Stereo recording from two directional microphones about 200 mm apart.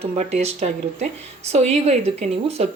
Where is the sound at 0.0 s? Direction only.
35° right (ahead or behind).